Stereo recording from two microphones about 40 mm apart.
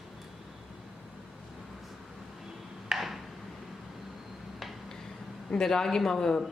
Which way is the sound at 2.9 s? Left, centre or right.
Centre.